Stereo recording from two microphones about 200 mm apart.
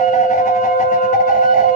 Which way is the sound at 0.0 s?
40° left (ahead or behind).